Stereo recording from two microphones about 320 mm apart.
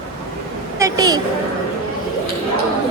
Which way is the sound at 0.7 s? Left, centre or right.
Centre.